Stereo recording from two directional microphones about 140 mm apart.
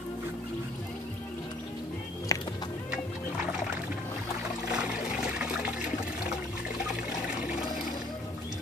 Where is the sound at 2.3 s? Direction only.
25° left (ahead or behind).